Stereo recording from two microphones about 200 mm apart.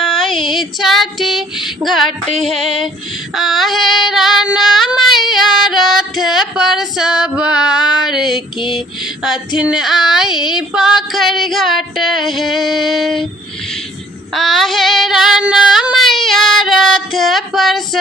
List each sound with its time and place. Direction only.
0.0 s female singing: centre (ahead or behind)
0.3 s female singing: 25° left (ahead or behind)
0.8 s female singing: centre (ahead or behind)
3.3 s child singing: centre (ahead or behind)
9.6 s female singing: 5° right (ahead or behind)
14.3 s child singing: centre (ahead or behind)